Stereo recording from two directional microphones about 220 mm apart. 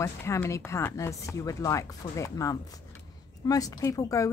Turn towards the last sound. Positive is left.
turn(degrees=15)  # may be behind; listen again after turning